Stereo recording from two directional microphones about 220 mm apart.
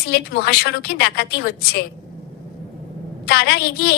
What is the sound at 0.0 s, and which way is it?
A woman's voice, 45° left (ahead or behind).